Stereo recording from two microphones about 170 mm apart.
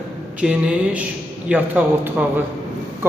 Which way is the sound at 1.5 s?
10° right (ahead or behind).